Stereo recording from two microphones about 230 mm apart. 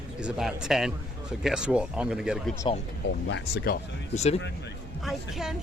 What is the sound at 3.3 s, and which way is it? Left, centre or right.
Speech, left.